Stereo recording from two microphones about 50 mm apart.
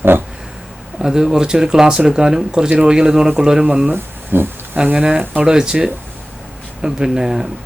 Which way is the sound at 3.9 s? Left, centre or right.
Right.